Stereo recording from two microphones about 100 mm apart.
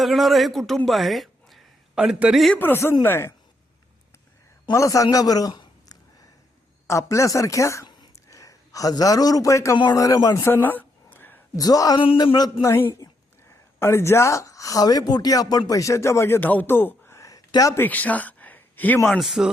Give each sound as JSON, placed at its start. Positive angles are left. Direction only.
{"t": 0.0, "sound": "a man's voice", "side_deg": 0}
{"t": 0.9, "sound": "a sound", "side_deg": 0}
{"t": 2.3, "sound": "a man's voice", "side_deg": 0}
{"t": 2.6, "sound": "speech", "side_deg": 20}
{"t": 4.7, "sound": "speech", "side_deg": 30}
{"t": 5.1, "sound": "a sound", "side_deg": 40}
{"t": 6.8, "sound": "a man's voice", "side_deg": 30}
{"t": 10.4, "sound": "a sound", "side_deg": 20}
{"t": 11.5, "sound": "speech", "side_deg": 35}
{"t": 11.9, "sound": "speech", "side_deg": 50}
{"t": 12.6, "sound": "speech", "side_deg": 25}
{"t": 17.7, "sound": "speech", "side_deg": 15}
{"t": 19.0, "sound": "a man's voice", "side_deg": 0}